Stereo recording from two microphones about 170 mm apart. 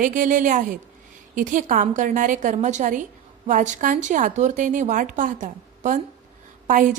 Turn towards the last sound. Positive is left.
turn(degrees=-50)  # may be behind; listen again after turning